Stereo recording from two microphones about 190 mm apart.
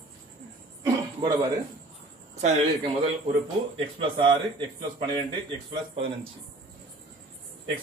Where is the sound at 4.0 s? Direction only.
25° right (ahead or behind).